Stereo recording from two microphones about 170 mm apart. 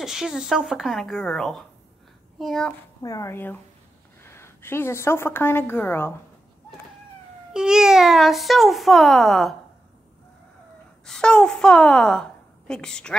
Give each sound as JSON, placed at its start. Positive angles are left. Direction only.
{"t": 0.0, "sound": "a child's voice", "side_deg": 0}
{"t": 3.0, "sound": "a woman's voice", "side_deg": 20}
{"t": 7.5, "sound": "a child's voice", "side_deg": -5}
{"t": 11.1, "sound": "a woman's voice", "side_deg": 5}